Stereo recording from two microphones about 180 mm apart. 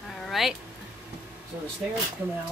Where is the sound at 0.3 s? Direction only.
Centre (ahead or behind).